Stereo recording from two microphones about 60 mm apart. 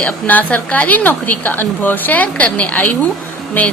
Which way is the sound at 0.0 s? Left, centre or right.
Left.